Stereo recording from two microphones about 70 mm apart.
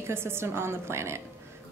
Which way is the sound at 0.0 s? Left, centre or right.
Right.